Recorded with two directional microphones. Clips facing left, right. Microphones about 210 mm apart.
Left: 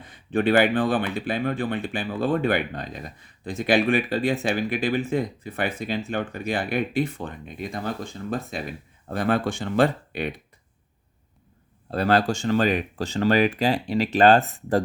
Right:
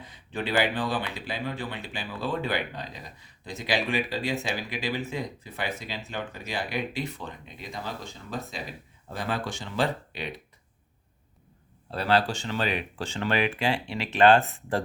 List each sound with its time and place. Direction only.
0.0 s speech: 55° left (ahead or behind)
11.9 s speech: 45° left (ahead or behind)